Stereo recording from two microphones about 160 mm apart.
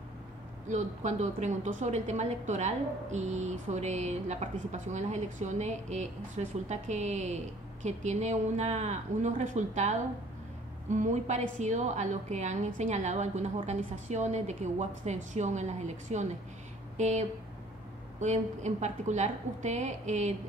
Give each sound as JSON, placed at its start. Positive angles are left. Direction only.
{"t": 0.7, "sound": "a woman's voice", "side_deg": -50}